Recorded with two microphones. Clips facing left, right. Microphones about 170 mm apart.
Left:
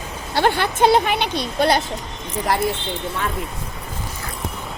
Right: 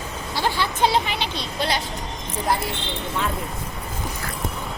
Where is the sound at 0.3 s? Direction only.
60° left (ahead or behind).